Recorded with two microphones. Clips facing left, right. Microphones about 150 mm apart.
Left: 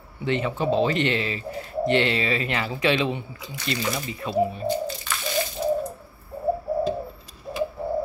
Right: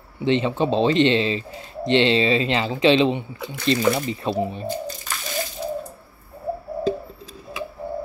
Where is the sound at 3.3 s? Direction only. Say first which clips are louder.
Right 8 dB; 55° right (ahead or behind).